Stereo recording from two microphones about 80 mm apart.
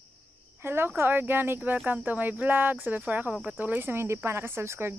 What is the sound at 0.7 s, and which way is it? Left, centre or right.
Speech, right.